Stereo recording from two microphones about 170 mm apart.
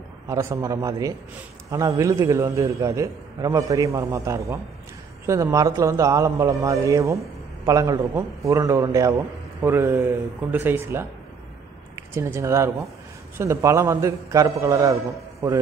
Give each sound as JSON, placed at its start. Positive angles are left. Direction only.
{"t": 0.3, "sound": "a man's voice", "side_deg": -20}